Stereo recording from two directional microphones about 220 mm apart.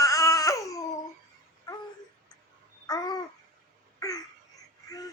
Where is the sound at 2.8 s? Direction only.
15° left (ahead or behind).